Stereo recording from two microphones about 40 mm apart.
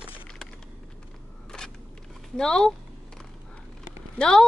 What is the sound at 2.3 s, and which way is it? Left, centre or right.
Speech, centre.